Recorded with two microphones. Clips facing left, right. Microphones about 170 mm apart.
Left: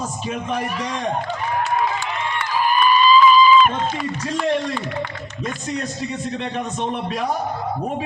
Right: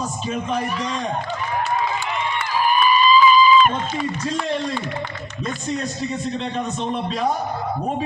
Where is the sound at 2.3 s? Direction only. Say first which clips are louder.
Even; centre (ahead or behind).